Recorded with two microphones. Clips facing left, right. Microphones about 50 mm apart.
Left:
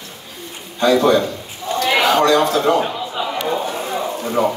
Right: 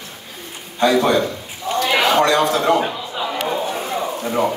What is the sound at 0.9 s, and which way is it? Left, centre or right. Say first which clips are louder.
Speech: left 3 dB; right.